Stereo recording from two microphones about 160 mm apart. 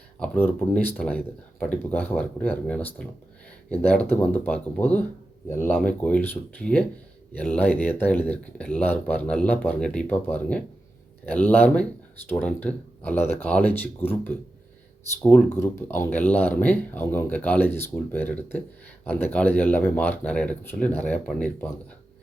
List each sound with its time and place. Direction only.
0.2 s speech: 10° left (ahead or behind)
15.5 s speech: 15° left (ahead or behind)